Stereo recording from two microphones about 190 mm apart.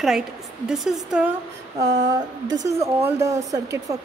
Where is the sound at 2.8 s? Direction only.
15° right (ahead or behind).